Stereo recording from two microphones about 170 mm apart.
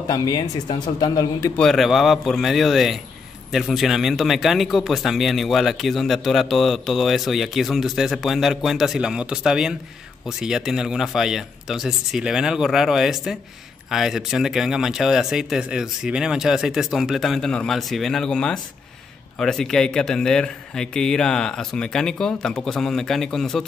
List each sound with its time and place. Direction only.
0.1 s speech: 25° left (ahead or behind)
1.6 s speech: centre (ahead or behind)